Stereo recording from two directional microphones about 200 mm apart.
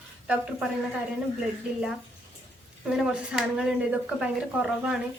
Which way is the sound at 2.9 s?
5° right (ahead or behind).